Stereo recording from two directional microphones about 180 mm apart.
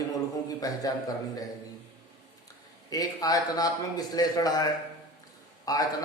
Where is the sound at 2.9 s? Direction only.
20° left (ahead or behind).